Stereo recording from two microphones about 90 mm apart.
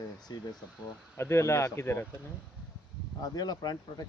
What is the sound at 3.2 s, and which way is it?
Speech, 45° left (ahead or behind).